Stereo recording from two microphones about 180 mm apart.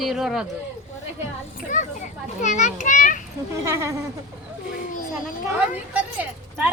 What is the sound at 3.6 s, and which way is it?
Speech, 15° right (ahead or behind).